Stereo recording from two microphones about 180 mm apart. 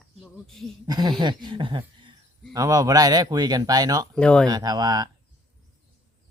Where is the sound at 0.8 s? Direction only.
20° right (ahead or behind).